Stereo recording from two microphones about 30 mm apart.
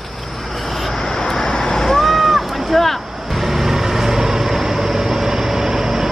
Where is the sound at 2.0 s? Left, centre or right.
Centre.